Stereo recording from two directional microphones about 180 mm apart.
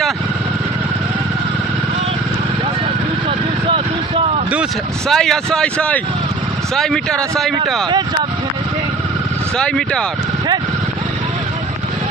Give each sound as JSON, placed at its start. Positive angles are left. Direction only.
{"t": 3.2, "sound": "vehicle", "side_deg": -35}
{"t": 5.0, "sound": "speech", "side_deg": 5}
{"t": 9.6, "sound": "speech", "side_deg": 5}